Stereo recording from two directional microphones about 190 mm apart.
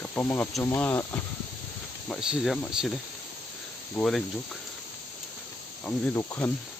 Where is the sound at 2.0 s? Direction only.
5° right (ahead or behind).